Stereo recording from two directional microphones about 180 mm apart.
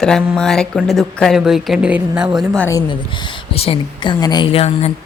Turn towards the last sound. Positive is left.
turn(degrees=35)  # may be behind; listen again after turning